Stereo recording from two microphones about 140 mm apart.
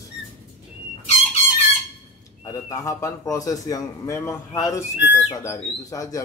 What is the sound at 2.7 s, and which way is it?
A man's voice, 25° left (ahead or behind).